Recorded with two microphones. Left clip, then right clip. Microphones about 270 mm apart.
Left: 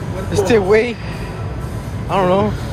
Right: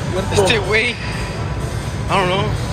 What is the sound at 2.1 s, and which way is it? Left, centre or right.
Speech, centre.